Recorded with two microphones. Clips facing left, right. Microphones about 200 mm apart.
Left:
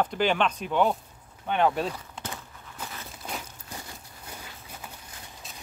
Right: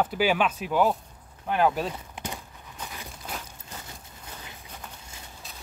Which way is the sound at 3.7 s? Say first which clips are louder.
Left 2 dB; 10° left (ahead or behind).